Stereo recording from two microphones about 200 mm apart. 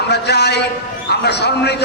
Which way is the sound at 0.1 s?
55° left (ahead or behind).